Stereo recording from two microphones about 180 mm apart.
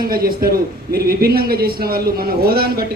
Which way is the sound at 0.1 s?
55° right (ahead or behind).